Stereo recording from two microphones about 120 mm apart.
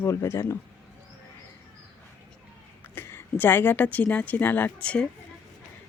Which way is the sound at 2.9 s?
20° left (ahead or behind).